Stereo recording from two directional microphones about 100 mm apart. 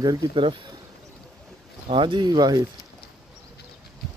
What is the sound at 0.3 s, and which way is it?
Speech, 55° right (ahead or behind).